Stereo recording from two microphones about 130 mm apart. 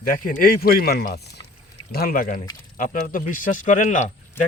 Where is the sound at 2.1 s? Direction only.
90° left; by 4.1 s 70° left (ahead or behind).